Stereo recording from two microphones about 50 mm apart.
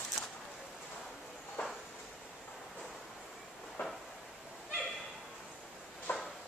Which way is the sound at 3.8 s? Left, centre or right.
Left.